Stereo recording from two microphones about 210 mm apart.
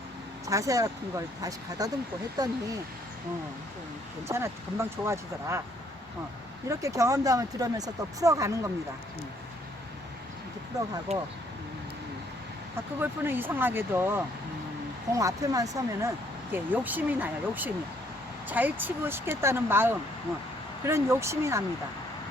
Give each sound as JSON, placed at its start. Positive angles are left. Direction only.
{"t": 0.4, "sound": "speech", "side_deg": -15}
{"t": 4.3, "sound": "speech", "side_deg": -10}
{"t": 6.7, "sound": "speech", "side_deg": -15}
{"t": 11.1, "sound": "speech", "side_deg": -30}
{"t": 13.0, "sound": "speech", "side_deg": -10}